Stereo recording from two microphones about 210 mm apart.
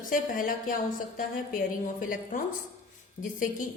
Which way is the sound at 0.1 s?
40° left (ahead or behind).